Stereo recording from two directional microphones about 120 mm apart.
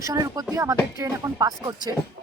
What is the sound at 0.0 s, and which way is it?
Speech, 30° right (ahead or behind).